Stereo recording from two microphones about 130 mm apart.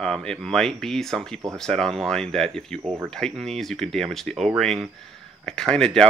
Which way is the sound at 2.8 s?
25° right (ahead or behind).